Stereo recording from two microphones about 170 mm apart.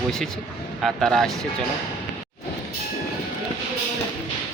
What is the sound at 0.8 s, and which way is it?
Speech, centre (ahead or behind).